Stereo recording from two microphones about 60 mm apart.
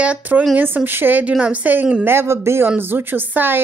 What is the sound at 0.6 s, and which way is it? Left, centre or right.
A woman's voice, right.